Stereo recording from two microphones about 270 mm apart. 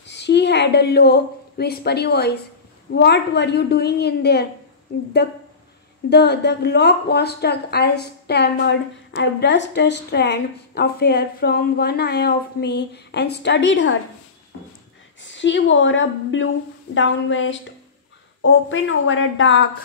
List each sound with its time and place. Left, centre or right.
0.0 s a woman's voice: left
15.2 s a woman's voice: left